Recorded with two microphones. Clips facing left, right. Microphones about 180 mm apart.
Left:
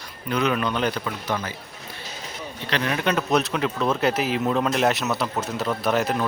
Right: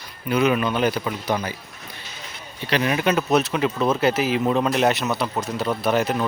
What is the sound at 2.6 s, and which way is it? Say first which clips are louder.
Speech: right 3 dB; 10° right (ahead or behind).